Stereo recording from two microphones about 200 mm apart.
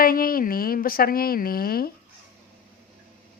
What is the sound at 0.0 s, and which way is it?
A woman's voice, 45° left (ahead or behind).